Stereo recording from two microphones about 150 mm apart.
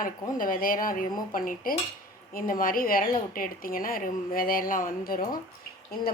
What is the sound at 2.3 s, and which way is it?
A woman's voice, 70° left (ahead or behind).